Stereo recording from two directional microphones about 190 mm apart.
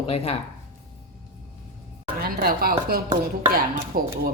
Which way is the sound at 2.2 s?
50° right (ahead or behind).